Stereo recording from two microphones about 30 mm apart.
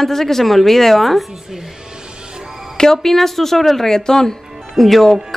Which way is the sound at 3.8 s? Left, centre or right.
Centre.